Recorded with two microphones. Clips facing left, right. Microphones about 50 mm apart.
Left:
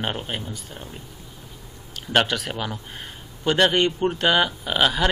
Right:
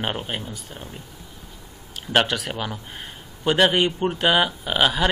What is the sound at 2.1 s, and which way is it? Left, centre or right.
Speech, centre.